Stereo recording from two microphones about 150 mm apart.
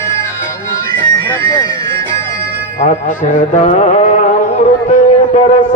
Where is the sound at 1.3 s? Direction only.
20° left (ahead or behind).